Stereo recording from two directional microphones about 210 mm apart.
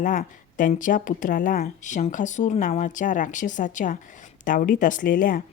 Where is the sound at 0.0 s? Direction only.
40° left (ahead or behind).